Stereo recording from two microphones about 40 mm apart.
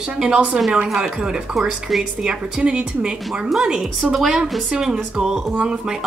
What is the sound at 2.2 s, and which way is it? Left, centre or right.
A woman's voice, centre.